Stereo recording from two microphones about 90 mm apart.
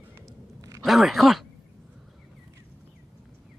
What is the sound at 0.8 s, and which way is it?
Speech, centre (ahead or behind).